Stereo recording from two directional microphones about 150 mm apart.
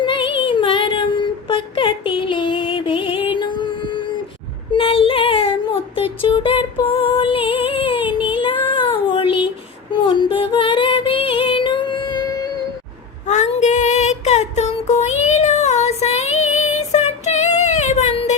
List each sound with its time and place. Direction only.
0.0 s a sound: 35° left (ahead or behind)
3.3 s music: 30° left (ahead or behind)
4.7 s child singing: 40° left (ahead or behind)
9.9 s female singing: 30° left (ahead or behind)
13.2 s female singing: 55° left (ahead or behind)